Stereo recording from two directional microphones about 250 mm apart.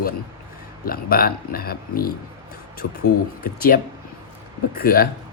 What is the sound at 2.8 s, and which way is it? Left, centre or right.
Speech, left.